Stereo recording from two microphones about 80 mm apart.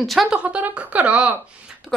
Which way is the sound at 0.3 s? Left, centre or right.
Centre.